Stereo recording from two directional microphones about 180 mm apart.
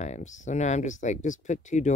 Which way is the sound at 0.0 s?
40° left (ahead or behind).